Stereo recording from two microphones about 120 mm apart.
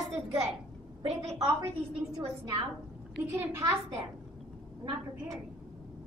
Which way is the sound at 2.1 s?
35° right (ahead or behind).